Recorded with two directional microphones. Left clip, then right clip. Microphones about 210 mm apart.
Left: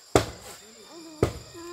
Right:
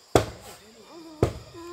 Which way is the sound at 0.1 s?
20° right (ahead or behind).